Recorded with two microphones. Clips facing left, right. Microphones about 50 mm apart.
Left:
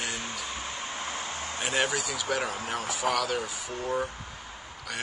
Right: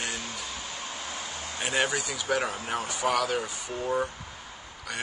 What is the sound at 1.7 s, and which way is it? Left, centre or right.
Speech, centre.